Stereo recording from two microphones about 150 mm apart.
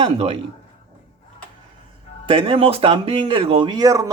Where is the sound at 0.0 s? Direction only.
40° right (ahead or behind).